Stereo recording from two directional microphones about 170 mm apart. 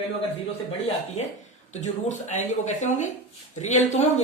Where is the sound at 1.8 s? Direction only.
45° left (ahead or behind).